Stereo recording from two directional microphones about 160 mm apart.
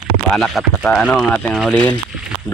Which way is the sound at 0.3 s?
Centre (ahead or behind).